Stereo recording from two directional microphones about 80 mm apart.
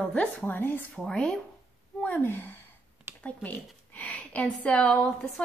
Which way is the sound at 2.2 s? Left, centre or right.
Left.